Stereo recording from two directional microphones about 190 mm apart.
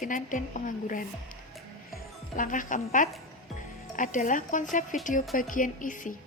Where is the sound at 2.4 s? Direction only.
45° left (ahead or behind).